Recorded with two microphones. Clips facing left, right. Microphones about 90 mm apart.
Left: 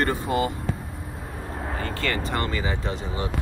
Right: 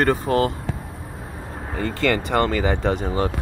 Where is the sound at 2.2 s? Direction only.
65° right (ahead or behind); by 3.3 s 50° right (ahead or behind).